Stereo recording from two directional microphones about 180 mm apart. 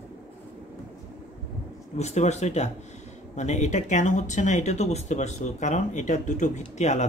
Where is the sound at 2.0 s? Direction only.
40° left (ahead or behind).